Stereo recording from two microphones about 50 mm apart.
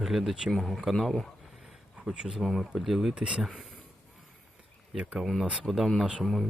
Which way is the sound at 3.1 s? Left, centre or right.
Right.